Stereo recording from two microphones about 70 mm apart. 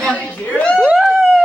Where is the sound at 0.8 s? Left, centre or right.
Centre.